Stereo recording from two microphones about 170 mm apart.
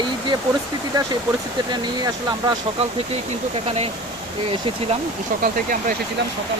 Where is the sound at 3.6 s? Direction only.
35° right (ahead or behind).